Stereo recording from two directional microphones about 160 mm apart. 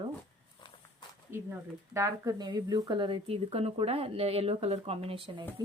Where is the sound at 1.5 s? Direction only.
20° right (ahead or behind); by 5.4 s 35° right (ahead or behind).